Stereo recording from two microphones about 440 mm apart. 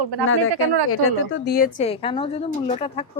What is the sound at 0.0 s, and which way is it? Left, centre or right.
Speech, right.